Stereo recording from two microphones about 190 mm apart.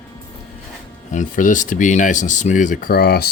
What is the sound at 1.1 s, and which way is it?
Speech, 40° left (ahead or behind).